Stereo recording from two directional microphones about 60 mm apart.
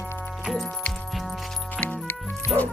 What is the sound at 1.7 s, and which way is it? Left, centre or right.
Music, left.